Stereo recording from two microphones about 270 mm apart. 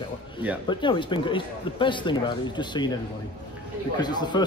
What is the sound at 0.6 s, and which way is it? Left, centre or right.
Speech, centre.